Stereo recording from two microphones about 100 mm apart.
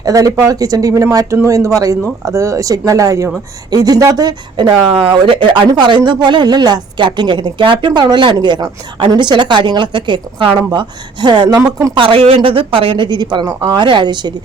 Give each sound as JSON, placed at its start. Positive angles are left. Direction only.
{"t": 0.0, "sound": "speech", "side_deg": -35}
{"t": 4.7, "sound": "speech", "side_deg": -60}
{"t": 11.4, "sound": "speech", "side_deg": -35}
{"t": 11.9, "sound": "speech", "side_deg": -65}